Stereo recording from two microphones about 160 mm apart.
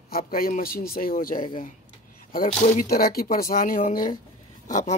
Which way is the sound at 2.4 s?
50° left (ahead or behind).